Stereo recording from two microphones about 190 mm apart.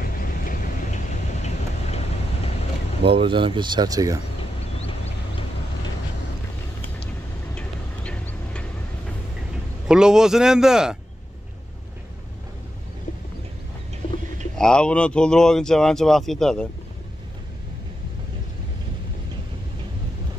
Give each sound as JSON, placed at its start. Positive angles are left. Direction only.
{"t": 0.0, "sound": "a sound", "side_deg": 45}
{"t": 3.0, "sound": "speech", "side_deg": -30}
{"t": 4.4, "sound": "a sound", "side_deg": 30}
{"t": 7.5, "sound": "vehicle", "side_deg": 5}
{"t": 9.8, "sound": "speech", "side_deg": -5}
{"t": 14.6, "sound": "speech", "side_deg": 5}